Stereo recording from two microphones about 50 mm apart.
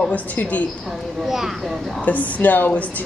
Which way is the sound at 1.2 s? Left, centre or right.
Centre.